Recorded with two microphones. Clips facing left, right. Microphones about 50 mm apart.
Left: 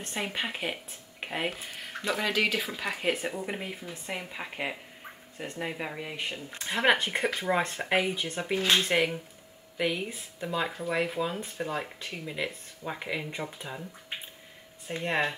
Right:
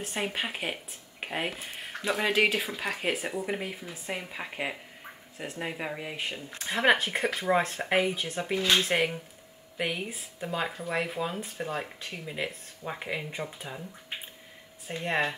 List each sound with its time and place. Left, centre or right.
0.0 s speech: centre
2.3 s speech: right
2.6 s speech: centre
15.0 s speech: centre